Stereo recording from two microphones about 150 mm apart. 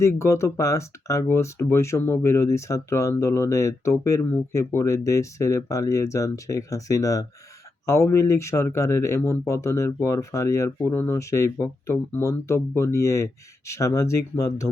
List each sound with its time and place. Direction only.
0.0 s speech: 20° left (ahead or behind)